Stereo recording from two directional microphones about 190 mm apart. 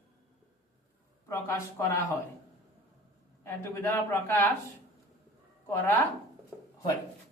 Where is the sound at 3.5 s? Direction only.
15° left (ahead or behind).